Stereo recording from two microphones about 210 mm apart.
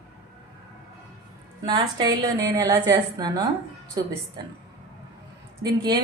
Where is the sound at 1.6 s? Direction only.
20° right (ahead or behind).